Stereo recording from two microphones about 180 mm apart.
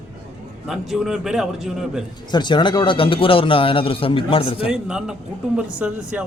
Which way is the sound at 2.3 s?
25° left (ahead or behind).